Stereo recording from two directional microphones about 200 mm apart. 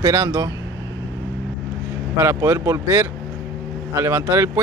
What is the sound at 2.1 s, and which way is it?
Speech, 15° right (ahead or behind).